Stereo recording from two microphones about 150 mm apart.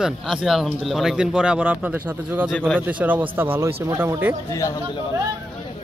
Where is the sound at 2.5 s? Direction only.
5° left (ahead or behind).